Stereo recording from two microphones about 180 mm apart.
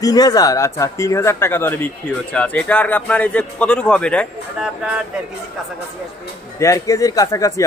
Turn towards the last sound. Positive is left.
turn(degrees=20)  # may be behind; listen again after turning